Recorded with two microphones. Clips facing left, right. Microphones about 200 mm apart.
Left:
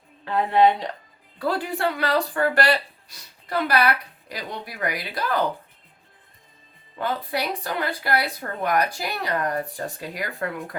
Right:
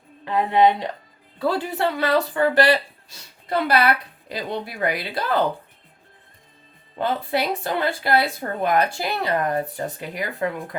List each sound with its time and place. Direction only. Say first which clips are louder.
0.3 s a woman's voice: right 1 dB; 15° right (ahead or behind)
7.0 s speech: right 3 dB; 25° right (ahead or behind)